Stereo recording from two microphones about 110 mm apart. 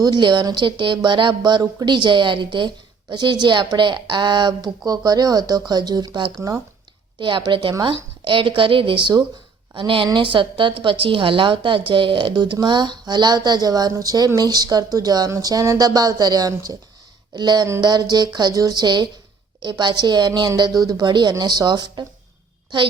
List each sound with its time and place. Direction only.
0.0 s a woman's voice: 40° right (ahead or behind)